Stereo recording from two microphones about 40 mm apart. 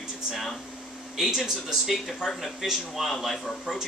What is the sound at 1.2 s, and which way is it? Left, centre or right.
Speech, centre.